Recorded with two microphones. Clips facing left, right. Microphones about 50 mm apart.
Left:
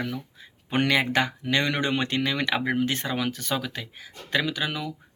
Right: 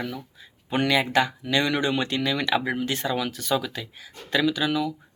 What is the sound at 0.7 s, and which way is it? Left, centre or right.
Speech, left.